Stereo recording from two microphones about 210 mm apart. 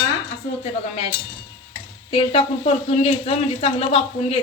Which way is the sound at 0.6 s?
25° left (ahead or behind).